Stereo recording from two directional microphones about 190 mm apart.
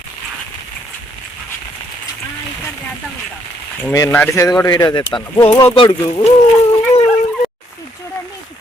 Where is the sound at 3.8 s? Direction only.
15° left (ahead or behind).